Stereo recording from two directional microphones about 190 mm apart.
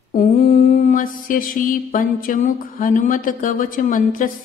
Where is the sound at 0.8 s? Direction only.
45° left (ahead or behind).